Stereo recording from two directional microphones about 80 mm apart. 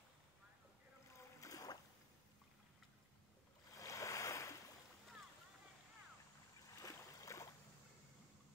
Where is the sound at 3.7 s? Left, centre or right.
Left.